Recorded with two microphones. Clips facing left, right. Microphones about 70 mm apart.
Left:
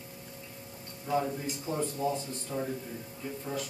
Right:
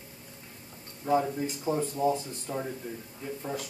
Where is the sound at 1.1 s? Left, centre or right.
Right.